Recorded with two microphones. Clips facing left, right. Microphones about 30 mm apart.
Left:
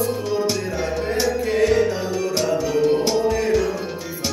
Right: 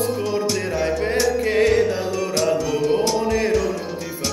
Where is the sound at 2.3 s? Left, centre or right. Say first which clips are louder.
Right 1 dB; centre.